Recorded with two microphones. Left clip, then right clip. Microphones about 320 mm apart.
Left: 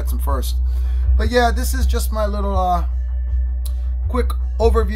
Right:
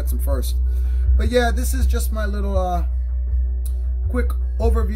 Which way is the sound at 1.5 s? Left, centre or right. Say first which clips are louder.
Left 3 dB; centre.